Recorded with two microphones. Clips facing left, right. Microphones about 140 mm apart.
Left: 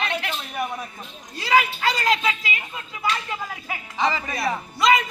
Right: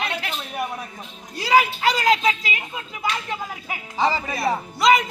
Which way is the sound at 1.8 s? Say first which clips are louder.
Right 3 dB; 25° right (ahead or behind).